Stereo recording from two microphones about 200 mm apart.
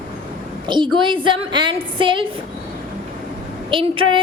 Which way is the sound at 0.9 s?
25° right (ahead or behind).